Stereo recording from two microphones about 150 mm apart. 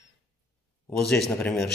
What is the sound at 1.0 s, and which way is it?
Speech, 5° left (ahead or behind).